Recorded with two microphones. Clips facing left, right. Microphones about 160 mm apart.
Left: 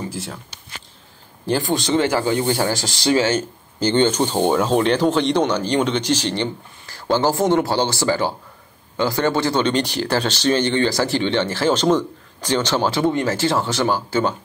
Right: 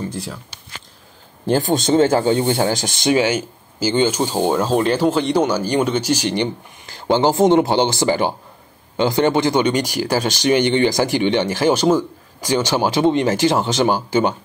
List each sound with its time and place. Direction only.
0.1 s speech: centre (ahead or behind)
1.6 s speech: 20° right (ahead or behind)